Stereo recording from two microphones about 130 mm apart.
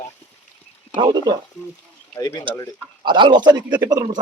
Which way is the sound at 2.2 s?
30° left (ahead or behind).